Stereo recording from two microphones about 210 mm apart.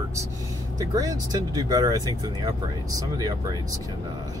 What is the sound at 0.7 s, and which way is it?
Speech, 15° right (ahead or behind).